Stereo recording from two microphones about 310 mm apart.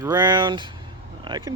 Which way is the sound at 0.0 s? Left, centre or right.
Centre.